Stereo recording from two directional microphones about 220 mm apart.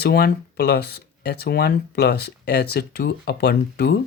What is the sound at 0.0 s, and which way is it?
Speech, 45° left (ahead or behind).